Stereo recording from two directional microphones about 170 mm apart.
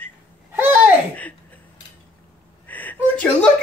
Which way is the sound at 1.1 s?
10° left (ahead or behind).